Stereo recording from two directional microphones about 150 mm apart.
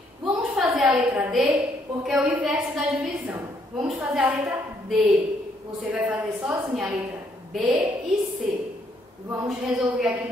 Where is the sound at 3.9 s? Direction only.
10° right (ahead or behind).